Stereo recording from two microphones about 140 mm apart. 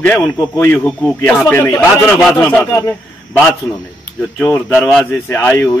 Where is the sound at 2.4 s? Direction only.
15° left (ahead or behind).